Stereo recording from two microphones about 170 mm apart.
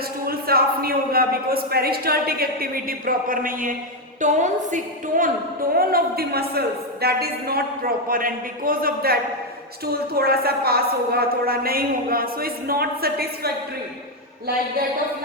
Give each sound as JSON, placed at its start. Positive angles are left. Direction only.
{"t": 0.3, "sound": "a woman's voice", "side_deg": -60}
{"t": 5.7, "sound": "a woman's voice", "side_deg": -60}